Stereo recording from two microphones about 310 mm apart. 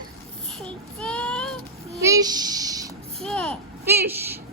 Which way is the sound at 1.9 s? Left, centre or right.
Centre.